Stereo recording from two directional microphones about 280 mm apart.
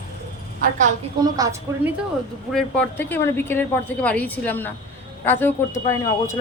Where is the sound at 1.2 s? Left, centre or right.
Centre.